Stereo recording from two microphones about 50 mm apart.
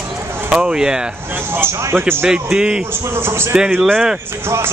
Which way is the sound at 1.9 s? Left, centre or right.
Right.